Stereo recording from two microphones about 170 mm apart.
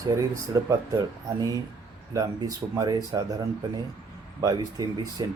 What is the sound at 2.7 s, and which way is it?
Speech, 20° right (ahead or behind).